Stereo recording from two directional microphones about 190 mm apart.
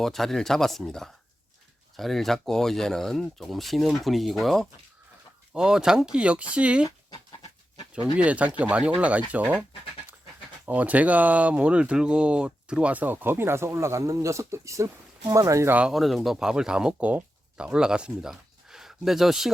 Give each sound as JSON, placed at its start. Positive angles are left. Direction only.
{"t": 0.0, "sound": "speech", "side_deg": 0}
{"t": 6.8, "sound": "dog", "side_deg": 20}
{"t": 8.2, "sound": "speech", "side_deg": -5}
{"t": 10.7, "sound": "speech", "side_deg": -10}